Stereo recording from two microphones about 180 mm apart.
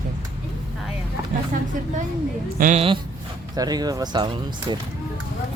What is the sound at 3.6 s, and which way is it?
Speech, 20° right (ahead or behind).